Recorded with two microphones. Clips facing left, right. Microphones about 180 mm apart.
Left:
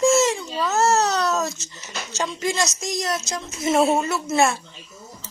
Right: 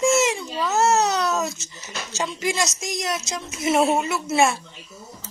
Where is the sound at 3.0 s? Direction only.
Centre (ahead or behind).